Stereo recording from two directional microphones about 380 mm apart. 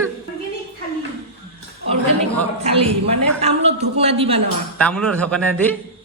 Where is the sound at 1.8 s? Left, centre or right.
Centre.